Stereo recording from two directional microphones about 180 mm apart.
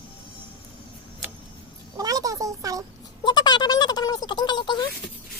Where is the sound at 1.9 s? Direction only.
20° right (ahead or behind).